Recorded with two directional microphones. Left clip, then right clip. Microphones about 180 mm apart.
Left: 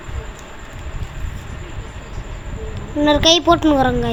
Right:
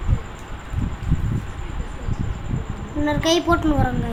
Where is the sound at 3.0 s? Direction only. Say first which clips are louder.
Left 7 dB; 25° left (ahead or behind).